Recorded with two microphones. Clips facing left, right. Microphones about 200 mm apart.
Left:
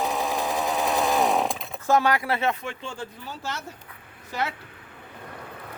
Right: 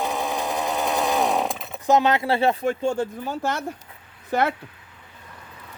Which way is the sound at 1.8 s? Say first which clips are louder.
Right 3 dB; 20° right (ahead or behind).